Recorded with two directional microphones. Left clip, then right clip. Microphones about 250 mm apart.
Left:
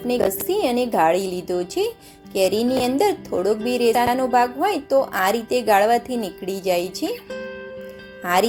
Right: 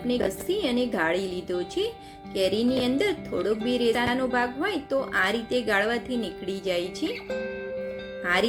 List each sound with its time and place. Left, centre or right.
0.1 s a woman's voice: centre
6.1 s a woman's voice: left
8.2 s speech: centre